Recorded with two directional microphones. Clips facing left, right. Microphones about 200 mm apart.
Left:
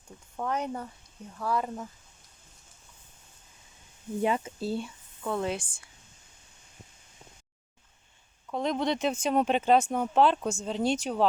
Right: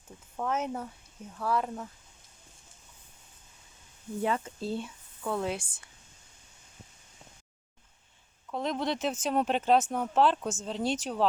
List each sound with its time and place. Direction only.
0.3 s speech: centre (ahead or behind)
4.2 s speech: 15° left (ahead or behind)
4.6 s speech: 5° left (ahead or behind)
8.5 s speech: centre (ahead or behind)